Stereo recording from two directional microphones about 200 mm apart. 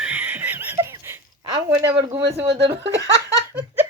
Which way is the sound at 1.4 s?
20° right (ahead or behind).